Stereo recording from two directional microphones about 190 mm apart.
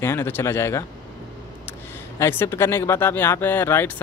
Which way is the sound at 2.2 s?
15° left (ahead or behind).